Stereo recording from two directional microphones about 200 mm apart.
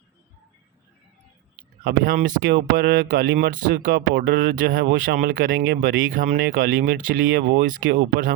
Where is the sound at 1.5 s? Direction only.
45° right (ahead or behind).